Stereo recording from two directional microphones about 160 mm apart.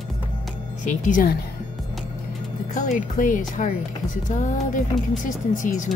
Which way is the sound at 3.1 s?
55° left (ahead or behind).